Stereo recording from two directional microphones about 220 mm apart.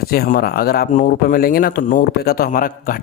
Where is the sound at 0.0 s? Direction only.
45° left (ahead or behind).